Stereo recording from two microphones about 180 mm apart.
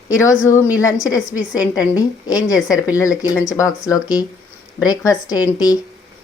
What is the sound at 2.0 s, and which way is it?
Speech, 20° left (ahead or behind).